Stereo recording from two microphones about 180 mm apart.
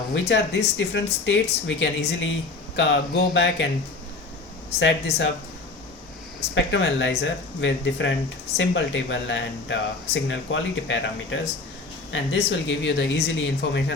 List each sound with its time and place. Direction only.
0.1 s speech: 75° left (ahead or behind)
4.8 s speech: 80° left
6.5 s speech: 90° left; by 13.9 s 70° left (ahead or behind)